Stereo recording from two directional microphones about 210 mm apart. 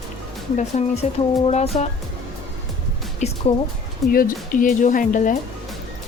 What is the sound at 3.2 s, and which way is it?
Speech, 35° left (ahead or behind).